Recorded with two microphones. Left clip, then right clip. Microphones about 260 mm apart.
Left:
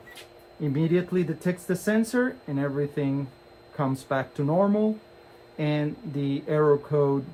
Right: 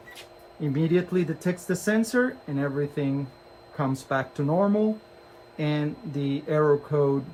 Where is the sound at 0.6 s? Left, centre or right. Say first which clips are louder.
Right 1 dB; left.